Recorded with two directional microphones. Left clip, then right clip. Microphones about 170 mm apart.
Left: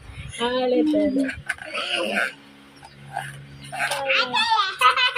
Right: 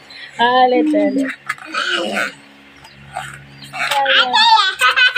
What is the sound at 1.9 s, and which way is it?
Speech, 10° left (ahead or behind).